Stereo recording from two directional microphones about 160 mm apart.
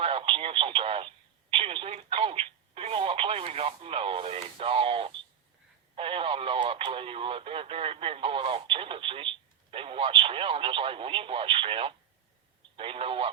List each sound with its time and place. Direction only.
0.0 s speech: 35° right (ahead or behind)
6.0 s radio: 35° right (ahead or behind)
9.7 s speech: 35° right (ahead or behind)